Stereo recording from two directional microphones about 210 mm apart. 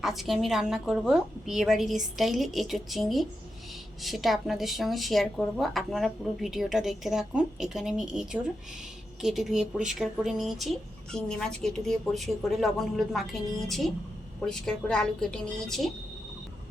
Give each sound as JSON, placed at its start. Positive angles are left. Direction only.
{"t": 0.0, "sound": "speech", "side_deg": 0}